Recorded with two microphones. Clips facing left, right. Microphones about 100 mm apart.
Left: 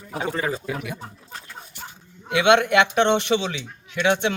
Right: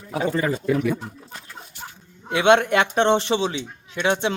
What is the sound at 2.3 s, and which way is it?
Speech, 35° right (ahead or behind).